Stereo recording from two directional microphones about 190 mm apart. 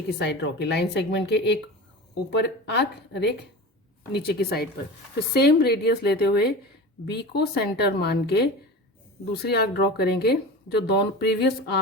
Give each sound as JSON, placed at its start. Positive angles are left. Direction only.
{"t": 0.2, "sound": "speech", "side_deg": 65}
{"t": 9.5, "sound": "speech", "side_deg": 60}